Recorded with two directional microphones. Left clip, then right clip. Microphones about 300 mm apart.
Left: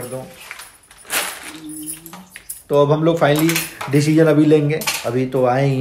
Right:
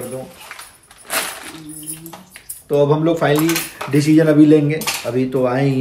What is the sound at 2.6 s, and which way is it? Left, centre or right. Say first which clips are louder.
Speech: even; centre.